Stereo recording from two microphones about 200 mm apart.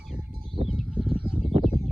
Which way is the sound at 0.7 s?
5° left (ahead or behind).